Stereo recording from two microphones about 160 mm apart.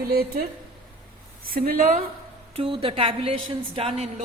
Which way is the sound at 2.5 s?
35° right (ahead or behind).